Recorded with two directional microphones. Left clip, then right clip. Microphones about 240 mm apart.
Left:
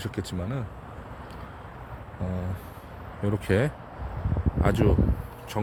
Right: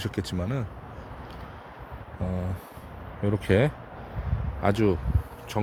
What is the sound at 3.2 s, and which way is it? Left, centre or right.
Speech, centre.